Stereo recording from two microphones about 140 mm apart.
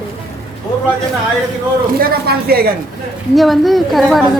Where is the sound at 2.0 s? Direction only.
90° right.